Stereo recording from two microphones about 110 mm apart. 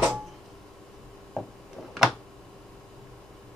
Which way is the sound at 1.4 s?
Centre (ahead or behind).